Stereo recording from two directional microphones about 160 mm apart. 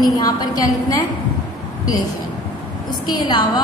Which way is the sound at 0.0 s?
25° left (ahead or behind).